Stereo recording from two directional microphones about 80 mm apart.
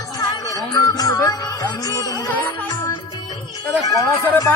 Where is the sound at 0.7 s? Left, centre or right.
Left.